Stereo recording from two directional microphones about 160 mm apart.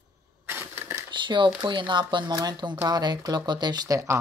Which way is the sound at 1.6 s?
30° right (ahead or behind).